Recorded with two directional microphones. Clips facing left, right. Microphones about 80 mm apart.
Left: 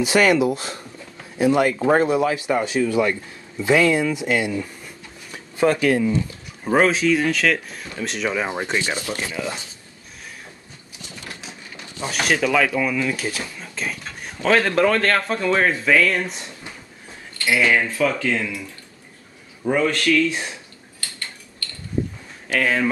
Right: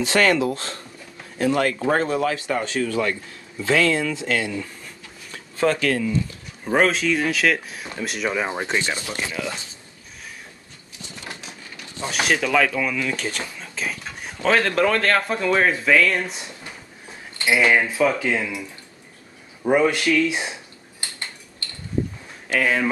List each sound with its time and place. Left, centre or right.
0.0 s speech: centre
5.3 s a sound: centre
6.7 s speech: centre
8.8 s speech: centre
12.1 s speech: centre
17.4 s speech: centre
19.6 s speech: centre
21.0 s a sound: right
22.5 s speech: centre